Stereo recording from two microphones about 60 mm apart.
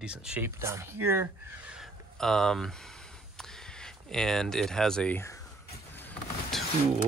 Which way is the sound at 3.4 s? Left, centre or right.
Centre.